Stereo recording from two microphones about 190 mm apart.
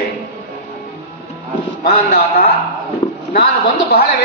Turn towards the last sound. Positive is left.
turn(degrees=55)  # may be behind; listen again after turning